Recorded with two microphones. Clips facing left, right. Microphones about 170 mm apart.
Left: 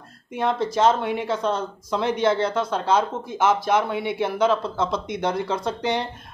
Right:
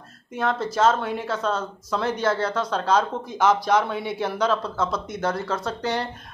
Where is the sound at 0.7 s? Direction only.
15° left (ahead or behind).